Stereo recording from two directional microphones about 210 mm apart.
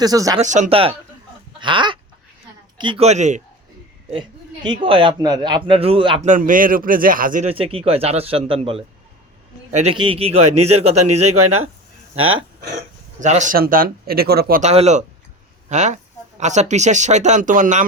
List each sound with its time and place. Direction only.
0.0 s speech: 15° right (ahead or behind)
0.3 s speech: 35° right (ahead or behind)
1.5 s chicken: 20° right (ahead or behind)
2.7 s speech: 25° right (ahead or behind)
4.1 s speech: 20° right (ahead or behind)
6.2 s speech: 40° right (ahead or behind)
7.5 s speech: 25° right (ahead or behind)
11.2 s speech: 90° right
12.1 s speech: 75° right (ahead or behind)
13.1 s speech: 35° right (ahead or behind)
14.6 s speech: 30° right (ahead or behind)